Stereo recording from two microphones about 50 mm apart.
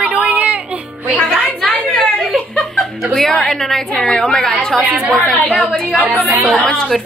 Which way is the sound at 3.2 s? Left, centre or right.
Centre.